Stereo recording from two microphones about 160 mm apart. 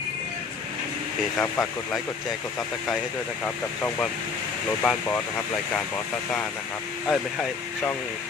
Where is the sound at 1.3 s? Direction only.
15° left (ahead or behind).